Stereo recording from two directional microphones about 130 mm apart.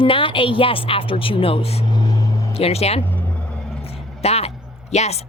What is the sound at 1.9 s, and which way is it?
Music, 30° left (ahead or behind).